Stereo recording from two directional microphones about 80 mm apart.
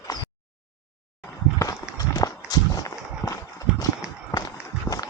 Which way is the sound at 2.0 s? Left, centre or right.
Left.